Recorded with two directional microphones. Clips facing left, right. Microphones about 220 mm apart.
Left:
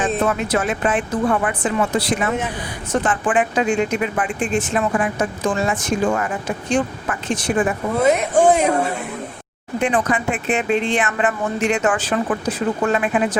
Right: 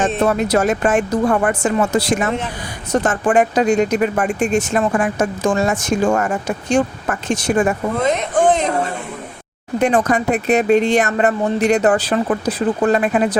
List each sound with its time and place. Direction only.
0.2 s speech: 40° right (ahead or behind)
7.9 s speech: 10° left (ahead or behind)
9.8 s speech: 40° right (ahead or behind)